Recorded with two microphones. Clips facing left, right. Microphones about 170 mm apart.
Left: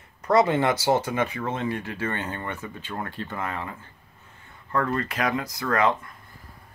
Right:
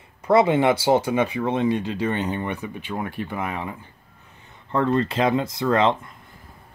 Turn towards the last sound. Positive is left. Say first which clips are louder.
# right 4 dB
turn(degrees=-25)  # may be behind; listen again after turning